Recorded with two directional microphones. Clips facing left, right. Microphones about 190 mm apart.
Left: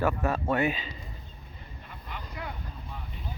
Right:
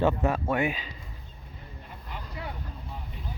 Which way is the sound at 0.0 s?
20° right (ahead or behind).